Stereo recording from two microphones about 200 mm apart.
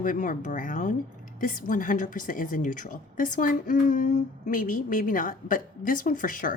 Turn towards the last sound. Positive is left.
turn(degrees=40)  # may be behind; listen again after turning